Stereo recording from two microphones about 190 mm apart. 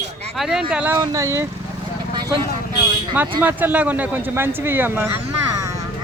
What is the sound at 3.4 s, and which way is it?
A man's voice, 10° right (ahead or behind).